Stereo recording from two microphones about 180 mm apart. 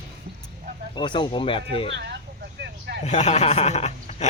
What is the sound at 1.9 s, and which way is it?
Speech, 70° right (ahead or behind).